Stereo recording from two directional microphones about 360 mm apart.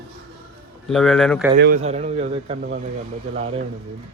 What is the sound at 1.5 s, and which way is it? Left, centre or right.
A man's voice, right.